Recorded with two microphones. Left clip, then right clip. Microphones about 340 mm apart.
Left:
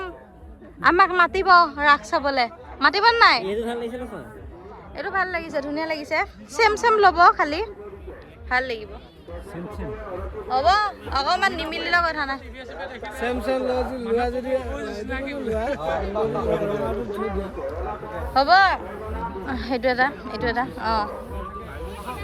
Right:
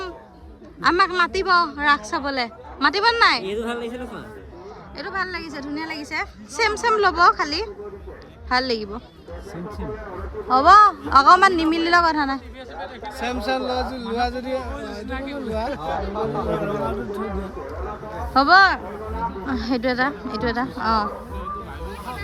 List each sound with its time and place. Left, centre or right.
0.8 s a man's voice: centre
4.9 s a woman's voice: centre
10.5 s a man's voice: right
18.3 s a man's voice: centre